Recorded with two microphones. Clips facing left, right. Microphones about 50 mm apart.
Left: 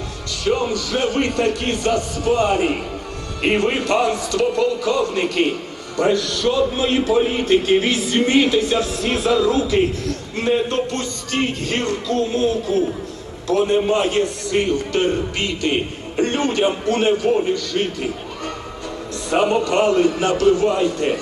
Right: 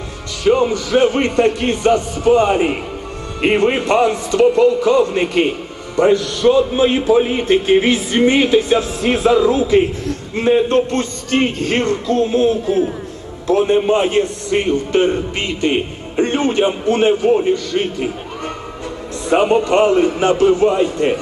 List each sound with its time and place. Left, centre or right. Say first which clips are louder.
0.4 s a man's voice: right 6 dB; right